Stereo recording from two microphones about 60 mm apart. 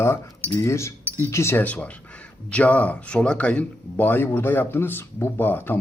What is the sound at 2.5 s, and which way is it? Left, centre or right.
Speech, left.